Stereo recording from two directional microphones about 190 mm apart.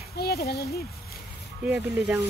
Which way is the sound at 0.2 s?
55° left (ahead or behind).